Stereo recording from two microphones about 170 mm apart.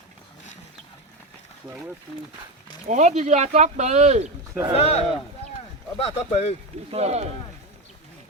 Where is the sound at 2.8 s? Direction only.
45° right (ahead or behind).